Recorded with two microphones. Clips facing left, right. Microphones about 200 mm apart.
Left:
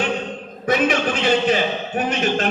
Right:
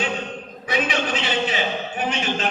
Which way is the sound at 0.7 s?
50° left (ahead or behind).